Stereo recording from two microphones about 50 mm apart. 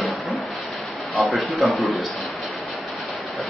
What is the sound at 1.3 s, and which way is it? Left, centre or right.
Speech, centre.